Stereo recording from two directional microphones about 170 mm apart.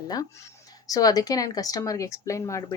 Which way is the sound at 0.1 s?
20° left (ahead or behind).